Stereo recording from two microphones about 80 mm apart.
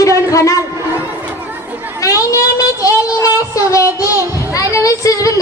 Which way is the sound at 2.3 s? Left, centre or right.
Left.